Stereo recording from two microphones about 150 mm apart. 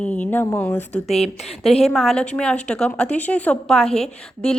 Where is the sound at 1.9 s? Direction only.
5° left (ahead or behind).